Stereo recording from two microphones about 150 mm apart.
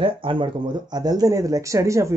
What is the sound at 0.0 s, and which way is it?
Speech, 35° right (ahead or behind).